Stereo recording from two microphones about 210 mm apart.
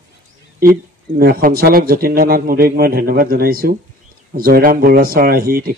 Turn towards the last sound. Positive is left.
turn(degrees=-45)  # may be behind; listen again after turning